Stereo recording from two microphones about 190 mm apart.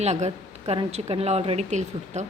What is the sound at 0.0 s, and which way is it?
A woman's voice, 35° right (ahead or behind).